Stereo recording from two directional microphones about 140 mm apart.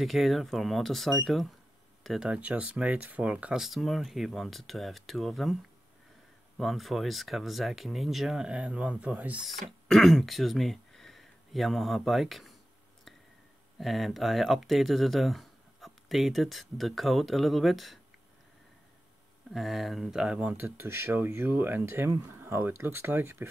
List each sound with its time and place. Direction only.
0.0 s speech: centre (ahead or behind)
6.6 s speech: centre (ahead or behind)
13.7 s speech: centre (ahead or behind)
19.5 s speech: centre (ahead or behind); by 23.5 s 15° right (ahead or behind)